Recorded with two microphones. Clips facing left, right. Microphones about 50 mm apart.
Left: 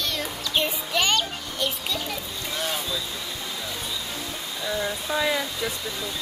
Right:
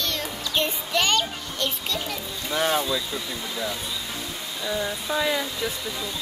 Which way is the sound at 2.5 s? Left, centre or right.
Right.